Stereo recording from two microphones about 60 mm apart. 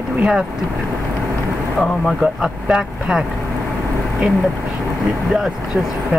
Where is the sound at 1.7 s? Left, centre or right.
Centre.